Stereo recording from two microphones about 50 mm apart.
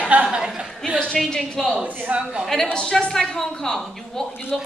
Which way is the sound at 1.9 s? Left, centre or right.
Right.